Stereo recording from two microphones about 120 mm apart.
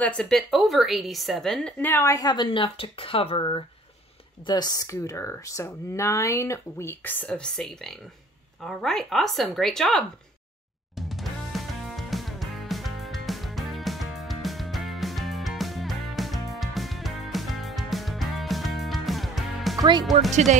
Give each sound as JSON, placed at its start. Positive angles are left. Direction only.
{"t": 0.0, "sound": "a woman's voice", "side_deg": 10}
{"t": 1.9, "sound": "speech", "side_deg": 20}
{"t": 2.1, "sound": "speech", "side_deg": 35}
{"t": 4.5, "sound": "a woman's voice", "side_deg": 35}
{"t": 11.0, "sound": "music", "side_deg": 0}
{"t": 19.8, "sound": "speech", "side_deg": -35}
{"t": 20.2, "sound": "speech", "side_deg": -75}